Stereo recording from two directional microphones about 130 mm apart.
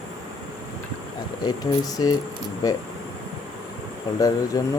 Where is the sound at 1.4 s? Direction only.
30° left (ahead or behind).